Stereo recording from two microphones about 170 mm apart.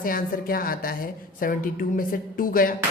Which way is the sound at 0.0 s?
55° left (ahead or behind).